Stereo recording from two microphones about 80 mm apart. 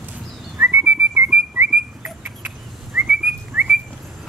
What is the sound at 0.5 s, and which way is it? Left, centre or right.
Whistling, right.